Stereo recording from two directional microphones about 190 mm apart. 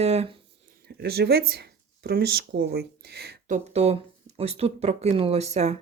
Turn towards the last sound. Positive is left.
turn(degrees=-35)  # may be behind; listen again after turning